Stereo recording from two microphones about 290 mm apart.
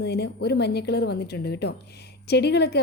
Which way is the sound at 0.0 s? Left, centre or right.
Left.